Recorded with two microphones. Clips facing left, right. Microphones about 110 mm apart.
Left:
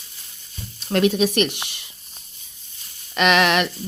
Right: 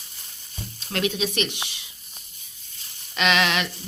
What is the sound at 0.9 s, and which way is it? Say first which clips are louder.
Speech: left 7 dB; 50° left (ahead or behind).